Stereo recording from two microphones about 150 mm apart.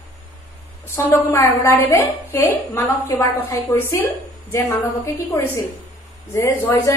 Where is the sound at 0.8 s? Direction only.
15° left (ahead or behind).